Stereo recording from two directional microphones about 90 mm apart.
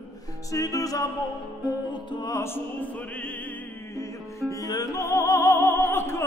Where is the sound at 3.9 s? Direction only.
35° left (ahead or behind).